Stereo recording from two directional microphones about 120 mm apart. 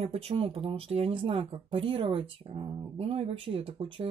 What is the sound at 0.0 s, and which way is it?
Speech, 60° right (ahead or behind).